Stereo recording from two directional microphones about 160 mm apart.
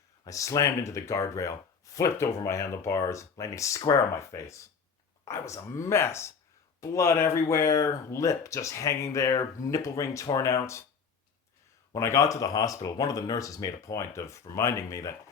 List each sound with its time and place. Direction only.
0.3 s speech: 20° left (ahead or behind)
11.9 s speech: 20° left (ahead or behind)